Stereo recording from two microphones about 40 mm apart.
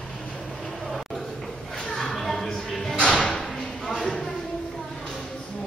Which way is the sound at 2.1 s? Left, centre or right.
Centre.